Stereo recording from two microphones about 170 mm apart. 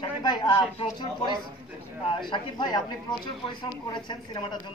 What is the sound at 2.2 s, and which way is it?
Speech, 25° left (ahead or behind).